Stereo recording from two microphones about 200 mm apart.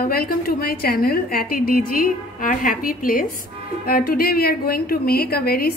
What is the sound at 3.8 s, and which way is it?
A woman's voice, 50° left (ahead or behind).